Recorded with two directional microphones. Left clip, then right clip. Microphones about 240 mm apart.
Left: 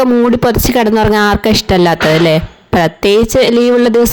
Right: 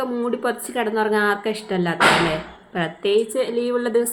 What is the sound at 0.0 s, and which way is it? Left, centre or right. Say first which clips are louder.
Speech: left 13 dB; left.